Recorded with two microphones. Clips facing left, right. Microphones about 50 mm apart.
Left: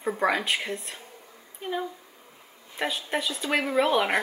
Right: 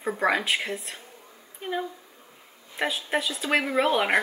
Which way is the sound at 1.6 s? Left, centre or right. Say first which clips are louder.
Right 1 dB; centre.